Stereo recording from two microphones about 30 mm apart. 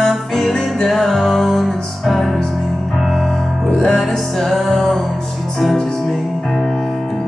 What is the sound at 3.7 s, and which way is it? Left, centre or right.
Music, centre.